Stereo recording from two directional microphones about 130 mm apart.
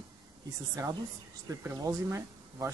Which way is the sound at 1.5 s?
20° right (ahead or behind).